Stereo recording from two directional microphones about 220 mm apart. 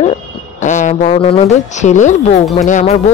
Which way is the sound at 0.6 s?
35° left (ahead or behind).